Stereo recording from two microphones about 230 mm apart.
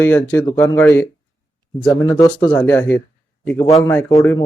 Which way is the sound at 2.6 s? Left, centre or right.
Centre.